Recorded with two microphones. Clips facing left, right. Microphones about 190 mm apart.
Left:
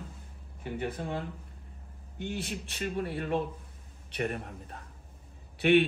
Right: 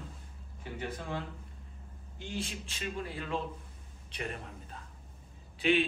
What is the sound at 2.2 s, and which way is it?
A man's voice, 60° left (ahead or behind).